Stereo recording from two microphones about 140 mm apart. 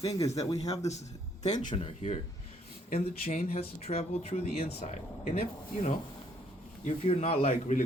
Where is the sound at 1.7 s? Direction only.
45° left (ahead or behind).